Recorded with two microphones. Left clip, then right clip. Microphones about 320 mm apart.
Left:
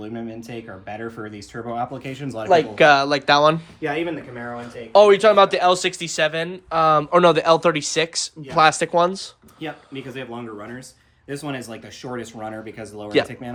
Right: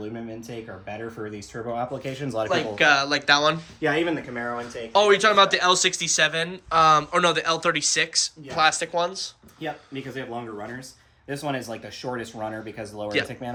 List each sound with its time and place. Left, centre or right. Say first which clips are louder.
0.0 s speech: left 2 dB; centre
2.5 s speech: left 7 dB; centre
3.8 s speech: right 1 dB; right
4.9 s speech: left 6 dB; centre; by 9.3 s left
9.6 s speech: left 1 dB; centre